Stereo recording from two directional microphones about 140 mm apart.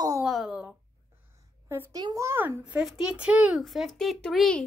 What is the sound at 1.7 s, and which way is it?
A child's voice, 20° right (ahead or behind).